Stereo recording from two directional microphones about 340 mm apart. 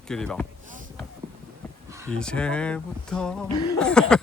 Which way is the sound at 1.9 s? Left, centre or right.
Centre.